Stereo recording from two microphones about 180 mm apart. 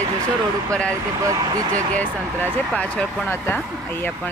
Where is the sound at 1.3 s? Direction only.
20° right (ahead or behind).